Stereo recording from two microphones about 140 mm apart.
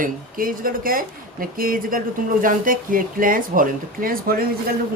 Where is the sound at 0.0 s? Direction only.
85° right.